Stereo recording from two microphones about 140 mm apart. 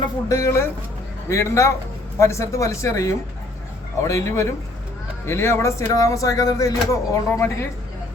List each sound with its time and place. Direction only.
0.0 s speech: 25° left (ahead or behind)